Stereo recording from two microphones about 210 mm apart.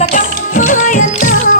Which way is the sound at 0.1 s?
40° left (ahead or behind).